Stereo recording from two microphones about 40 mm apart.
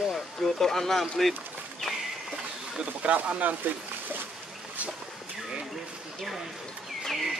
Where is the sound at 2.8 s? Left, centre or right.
Right.